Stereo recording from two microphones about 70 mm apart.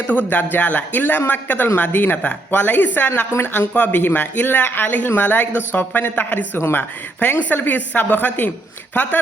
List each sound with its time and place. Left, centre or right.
0.1 s a woman's voice: left
7.2 s speech: left